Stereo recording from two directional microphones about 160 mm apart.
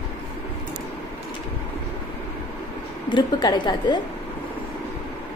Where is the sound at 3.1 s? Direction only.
25° left (ahead or behind).